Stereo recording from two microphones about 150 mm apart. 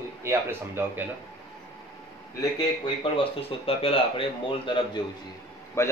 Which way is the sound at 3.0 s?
40° left (ahead or behind).